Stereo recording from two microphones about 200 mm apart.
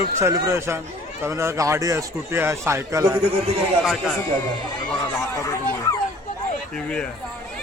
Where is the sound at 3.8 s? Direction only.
Centre (ahead or behind).